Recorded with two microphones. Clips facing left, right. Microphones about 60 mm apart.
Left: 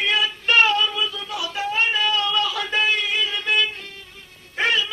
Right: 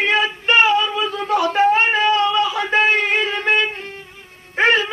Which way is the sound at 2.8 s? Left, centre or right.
Right.